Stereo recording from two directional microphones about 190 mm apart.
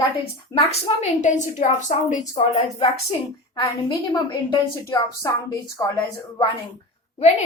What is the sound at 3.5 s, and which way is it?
A woman's voice, 25° left (ahead or behind).